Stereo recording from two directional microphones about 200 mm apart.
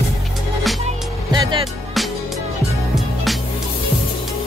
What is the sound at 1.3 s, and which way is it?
Music, 25° right (ahead or behind).